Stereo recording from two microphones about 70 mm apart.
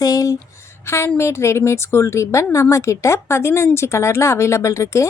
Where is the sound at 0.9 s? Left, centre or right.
Left.